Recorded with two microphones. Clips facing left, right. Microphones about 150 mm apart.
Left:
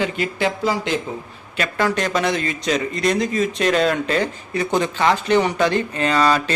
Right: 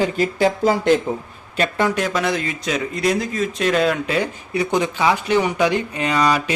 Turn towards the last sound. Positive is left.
turn(degrees=-10)  # may be behind; listen again after turning